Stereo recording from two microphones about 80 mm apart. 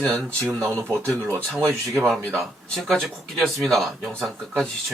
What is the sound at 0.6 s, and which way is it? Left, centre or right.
Speech, right.